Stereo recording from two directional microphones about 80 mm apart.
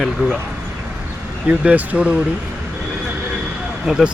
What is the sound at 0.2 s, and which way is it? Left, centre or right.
Speech, centre.